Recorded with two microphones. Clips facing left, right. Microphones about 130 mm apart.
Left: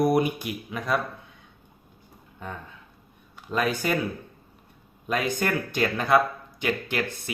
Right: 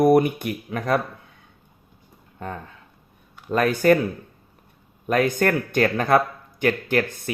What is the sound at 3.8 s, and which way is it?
Speech, 50° right (ahead or behind).